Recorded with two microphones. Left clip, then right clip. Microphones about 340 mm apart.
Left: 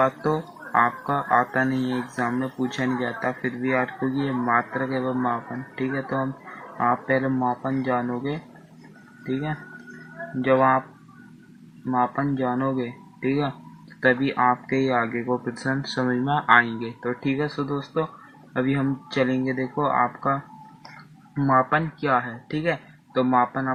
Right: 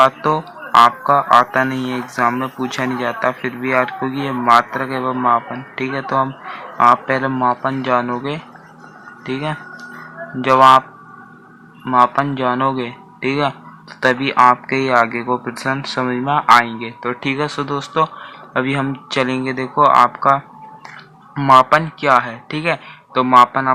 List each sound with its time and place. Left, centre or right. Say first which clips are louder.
0.0 s speech: right 9 dB; centre
10.4 s speech: right 10 dB; centre
11.9 s speech: right 10 dB; centre